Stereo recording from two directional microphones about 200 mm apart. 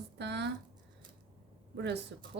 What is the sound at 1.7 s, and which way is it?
Speech, 60° right (ahead or behind).